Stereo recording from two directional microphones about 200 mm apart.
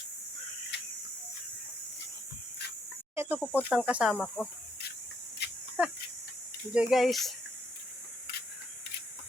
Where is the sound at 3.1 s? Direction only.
10° right (ahead or behind).